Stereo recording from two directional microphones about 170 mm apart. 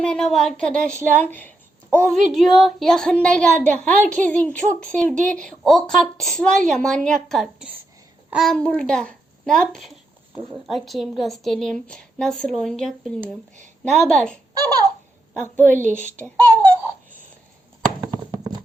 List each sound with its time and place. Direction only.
0.0 s a child's voice: 5° left (ahead or behind)
14.5 s a sound: 20° right (ahead or behind)
15.6 s a woman's voice: 10° left (ahead or behind)